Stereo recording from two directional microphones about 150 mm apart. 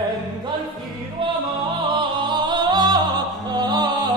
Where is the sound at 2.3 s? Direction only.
30° right (ahead or behind).